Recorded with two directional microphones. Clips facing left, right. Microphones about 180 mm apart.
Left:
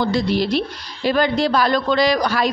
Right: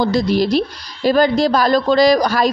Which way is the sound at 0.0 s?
40° right (ahead or behind).